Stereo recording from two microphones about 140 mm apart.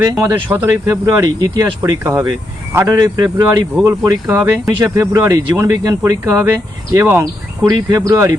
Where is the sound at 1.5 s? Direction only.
20° right (ahead or behind).